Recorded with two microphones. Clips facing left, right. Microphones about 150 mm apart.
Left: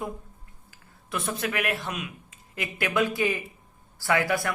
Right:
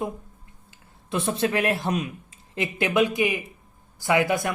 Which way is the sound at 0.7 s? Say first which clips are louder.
Right 4 dB; 25° right (ahead or behind).